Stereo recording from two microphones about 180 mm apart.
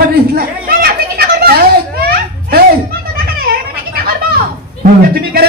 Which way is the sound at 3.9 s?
55° right (ahead or behind).